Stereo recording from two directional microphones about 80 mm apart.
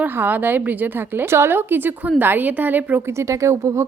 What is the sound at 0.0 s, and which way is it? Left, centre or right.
A woman's voice, right.